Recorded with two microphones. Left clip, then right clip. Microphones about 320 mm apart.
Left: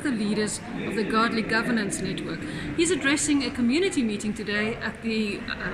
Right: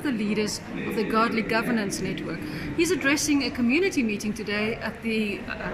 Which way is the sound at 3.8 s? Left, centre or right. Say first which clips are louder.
Right 1 dB; left.